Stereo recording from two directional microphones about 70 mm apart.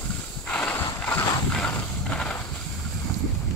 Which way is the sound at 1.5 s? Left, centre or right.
Centre.